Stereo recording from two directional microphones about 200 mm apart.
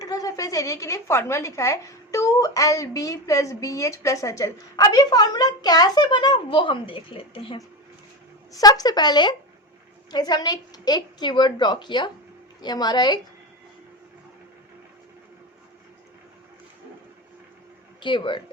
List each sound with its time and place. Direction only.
0.0 s a woman's voice: 20° left (ahead or behind)
18.0 s a woman's voice: 25° left (ahead or behind)